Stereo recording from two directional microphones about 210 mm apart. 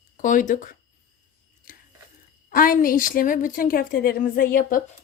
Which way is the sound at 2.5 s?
40° left (ahead or behind).